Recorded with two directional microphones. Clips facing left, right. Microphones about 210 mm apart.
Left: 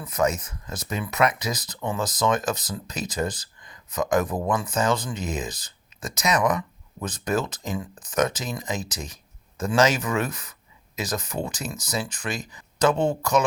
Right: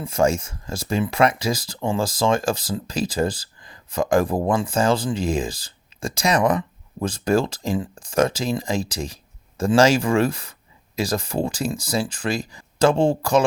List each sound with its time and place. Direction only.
0.0 s speech: 30° right (ahead or behind)